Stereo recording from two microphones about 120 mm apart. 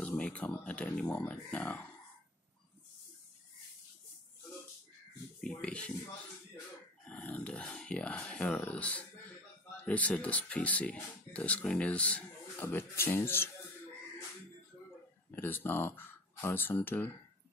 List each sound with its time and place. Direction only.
0.0 s a sound: 10° left (ahead or behind)
0.5 s speech: 15° left (ahead or behind)
5.5 s speech: 10° left (ahead or behind)
7.1 s speech: 10° left (ahead or behind)
15.3 s speech: 15° left (ahead or behind)